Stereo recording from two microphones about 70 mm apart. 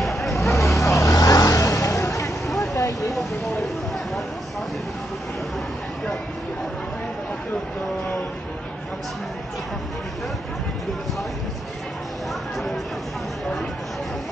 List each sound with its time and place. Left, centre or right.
0.0 s vehicle: centre
0.6 s vehicle: left
2.4 s vehicle: centre
2.7 s vehicle: left
3.1 s vehicle: centre